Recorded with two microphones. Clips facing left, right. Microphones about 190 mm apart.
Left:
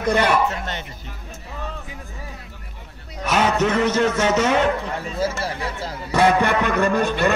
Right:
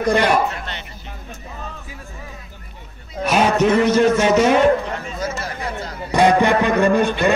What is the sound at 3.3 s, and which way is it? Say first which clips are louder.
A man's voice: right 4 dB; 10° right (ahead or behind).